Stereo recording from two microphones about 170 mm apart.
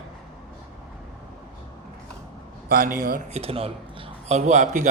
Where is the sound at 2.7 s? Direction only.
55° right (ahead or behind).